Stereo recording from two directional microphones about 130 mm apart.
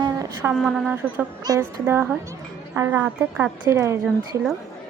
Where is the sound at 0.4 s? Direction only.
10° right (ahead or behind).